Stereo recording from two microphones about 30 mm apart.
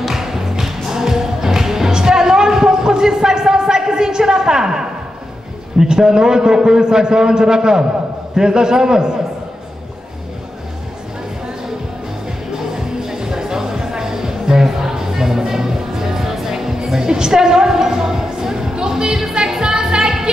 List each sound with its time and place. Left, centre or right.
0.0 s music: centre
1.9 s a sound: right
5.8 s a man's voice: right
12.7 s music: centre